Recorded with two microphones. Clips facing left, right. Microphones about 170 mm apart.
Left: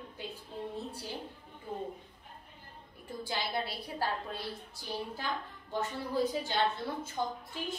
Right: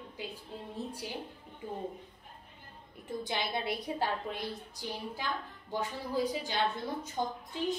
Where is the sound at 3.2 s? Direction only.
20° right (ahead or behind).